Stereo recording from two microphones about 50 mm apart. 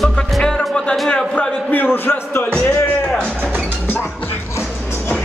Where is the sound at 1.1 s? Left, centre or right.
Centre.